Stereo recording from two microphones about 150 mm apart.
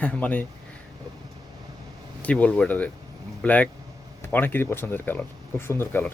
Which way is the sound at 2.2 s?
10° left (ahead or behind).